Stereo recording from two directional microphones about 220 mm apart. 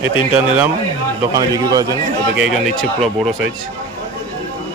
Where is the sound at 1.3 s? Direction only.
15° right (ahead or behind).